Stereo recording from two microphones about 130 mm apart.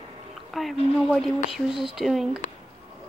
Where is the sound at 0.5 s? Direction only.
Centre (ahead or behind).